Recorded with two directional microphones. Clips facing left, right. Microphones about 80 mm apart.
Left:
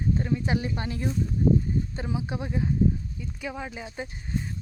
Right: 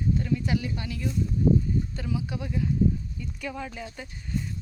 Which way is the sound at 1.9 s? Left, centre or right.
Left.